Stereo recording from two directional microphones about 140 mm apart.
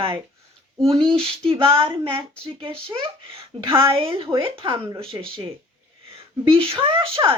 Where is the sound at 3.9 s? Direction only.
40° right (ahead or behind).